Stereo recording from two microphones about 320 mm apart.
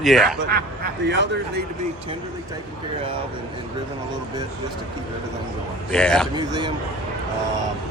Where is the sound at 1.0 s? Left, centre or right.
Right.